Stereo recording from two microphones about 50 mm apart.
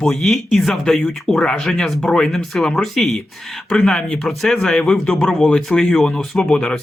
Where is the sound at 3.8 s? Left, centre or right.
Centre.